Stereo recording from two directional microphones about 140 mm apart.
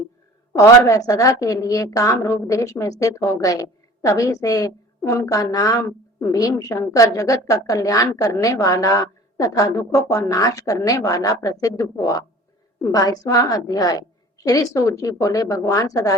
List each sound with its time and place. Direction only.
0.9 s a woman's voice: 25° left (ahead or behind)